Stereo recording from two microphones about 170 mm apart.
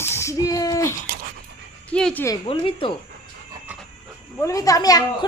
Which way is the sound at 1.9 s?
5° left (ahead or behind).